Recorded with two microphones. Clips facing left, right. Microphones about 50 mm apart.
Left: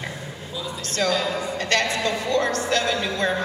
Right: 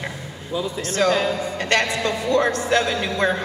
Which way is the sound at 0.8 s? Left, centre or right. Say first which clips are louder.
Right 3 dB; centre.